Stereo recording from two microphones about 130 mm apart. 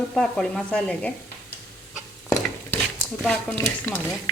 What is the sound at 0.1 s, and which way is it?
A woman's voice, 5° left (ahead or behind).